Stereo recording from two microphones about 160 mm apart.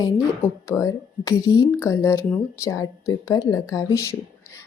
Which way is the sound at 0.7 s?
20° left (ahead or behind).